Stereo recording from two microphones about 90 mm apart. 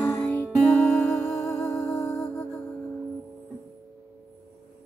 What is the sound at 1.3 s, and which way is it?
Music, 35° left (ahead or behind).